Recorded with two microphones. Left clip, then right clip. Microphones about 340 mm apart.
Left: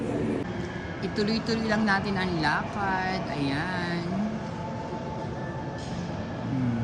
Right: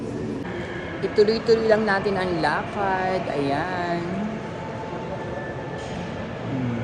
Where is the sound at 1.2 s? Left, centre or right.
Centre.